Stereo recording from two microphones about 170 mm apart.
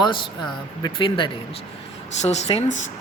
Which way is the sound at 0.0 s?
30° left (ahead or behind).